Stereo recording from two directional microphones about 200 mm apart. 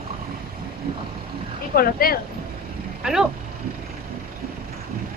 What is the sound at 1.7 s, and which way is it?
Speech, 50° left (ahead or behind).